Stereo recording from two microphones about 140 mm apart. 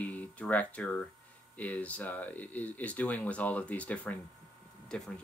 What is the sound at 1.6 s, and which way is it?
Speech, 10° left (ahead or behind).